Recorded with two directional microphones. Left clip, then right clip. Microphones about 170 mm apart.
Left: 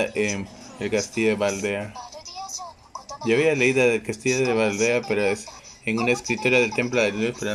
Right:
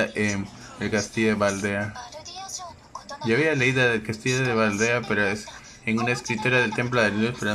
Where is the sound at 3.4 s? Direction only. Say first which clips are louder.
Left 2 dB; 20° left (ahead or behind).